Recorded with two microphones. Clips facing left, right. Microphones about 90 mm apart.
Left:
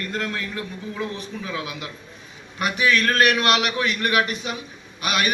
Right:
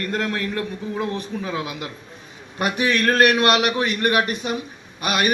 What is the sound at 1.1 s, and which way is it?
Speech, 35° right (ahead or behind).